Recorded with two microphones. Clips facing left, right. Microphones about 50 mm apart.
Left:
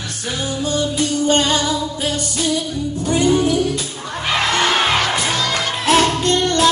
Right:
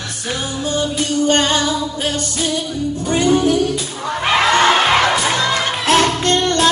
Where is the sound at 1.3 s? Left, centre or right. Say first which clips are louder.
Right 1 dB; right.